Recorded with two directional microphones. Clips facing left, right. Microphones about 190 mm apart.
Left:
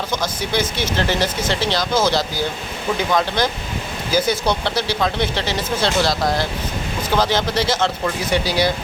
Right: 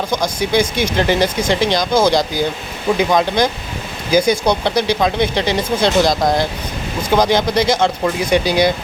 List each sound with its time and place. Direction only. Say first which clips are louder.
0.1 s speech: right 6 dB; 15° right (ahead or behind)